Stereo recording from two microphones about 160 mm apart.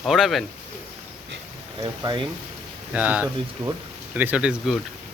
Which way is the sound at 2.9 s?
10° right (ahead or behind).